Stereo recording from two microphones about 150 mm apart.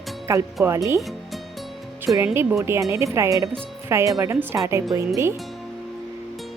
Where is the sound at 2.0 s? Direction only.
15° right (ahead or behind).